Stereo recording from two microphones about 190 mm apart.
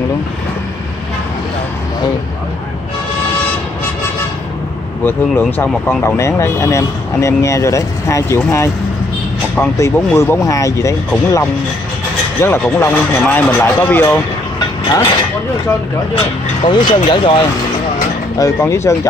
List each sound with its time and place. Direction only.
5.0 s speech: 10° left (ahead or behind)
16.6 s speech: 25° left (ahead or behind)
18.4 s speech: 15° left (ahead or behind)